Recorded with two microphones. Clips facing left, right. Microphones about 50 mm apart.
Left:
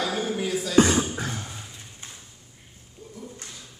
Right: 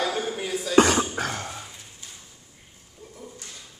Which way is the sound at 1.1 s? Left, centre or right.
Right.